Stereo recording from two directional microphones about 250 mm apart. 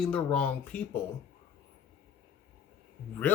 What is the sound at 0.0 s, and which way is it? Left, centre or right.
Speech, centre.